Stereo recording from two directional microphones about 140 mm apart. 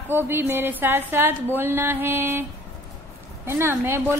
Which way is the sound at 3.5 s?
20° right (ahead or behind).